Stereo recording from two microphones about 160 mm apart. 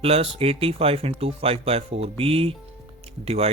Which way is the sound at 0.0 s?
35° right (ahead or behind).